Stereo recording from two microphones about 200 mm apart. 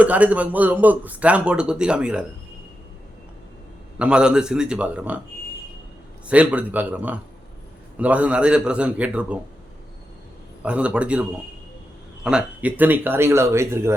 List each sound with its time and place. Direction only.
0.0 s a man's voice: 5° right (ahead or behind)
3.9 s a man's voice: 5° right (ahead or behind)
6.2 s a man's voice: 5° right (ahead or behind)
10.6 s a man's voice: 5° right (ahead or behind)